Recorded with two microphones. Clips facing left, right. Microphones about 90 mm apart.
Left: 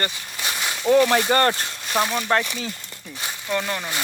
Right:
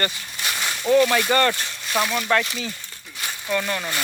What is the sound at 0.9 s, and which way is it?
Speech, 25° left (ahead or behind).